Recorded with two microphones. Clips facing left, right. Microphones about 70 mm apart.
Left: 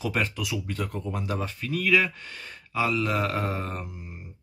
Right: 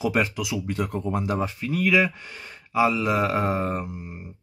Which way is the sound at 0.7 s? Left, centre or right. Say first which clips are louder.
Right 5 dB; centre.